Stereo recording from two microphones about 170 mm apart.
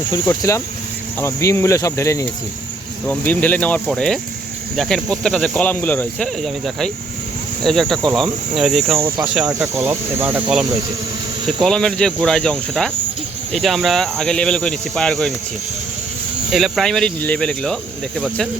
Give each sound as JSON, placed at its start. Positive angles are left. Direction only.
{"t": 0.3, "sound": "cricket", "side_deg": 15}
{"t": 3.8, "sound": "speech", "side_deg": 5}
{"t": 9.7, "sound": "cricket", "side_deg": -15}
{"t": 11.4, "sound": "speech", "side_deg": 0}
{"t": 16.5, "sound": "speech", "side_deg": 0}